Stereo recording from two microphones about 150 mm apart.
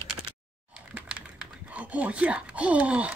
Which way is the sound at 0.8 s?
5° right (ahead or behind).